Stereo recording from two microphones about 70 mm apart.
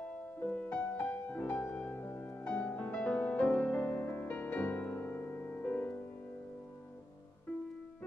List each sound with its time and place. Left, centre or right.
0.4 s music: centre
2.4 s music: centre